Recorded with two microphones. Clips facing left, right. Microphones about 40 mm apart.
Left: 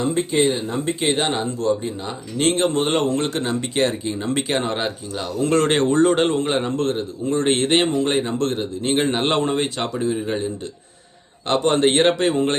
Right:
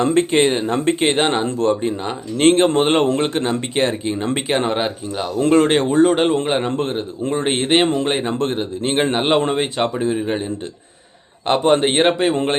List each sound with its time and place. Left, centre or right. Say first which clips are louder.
0.0 s speech: right 4 dB; right
4.4 s a man's voice: right 3 dB; centre
6.3 s speech: right 2 dB; centre
9.1 s a man's voice: right 4 dB; centre
9.4 s a man's voice: right 3 dB; right